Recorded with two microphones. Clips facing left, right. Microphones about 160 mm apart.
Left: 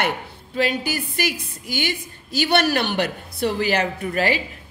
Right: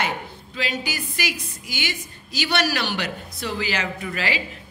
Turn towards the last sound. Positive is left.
turn(degrees=50)  # may be behind; listen again after turning